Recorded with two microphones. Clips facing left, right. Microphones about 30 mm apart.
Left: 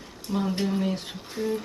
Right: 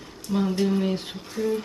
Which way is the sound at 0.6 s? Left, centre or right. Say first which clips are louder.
Right 3 dB; centre.